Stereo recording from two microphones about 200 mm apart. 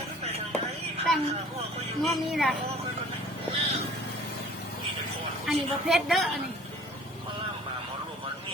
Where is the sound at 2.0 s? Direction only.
Centre (ahead or behind).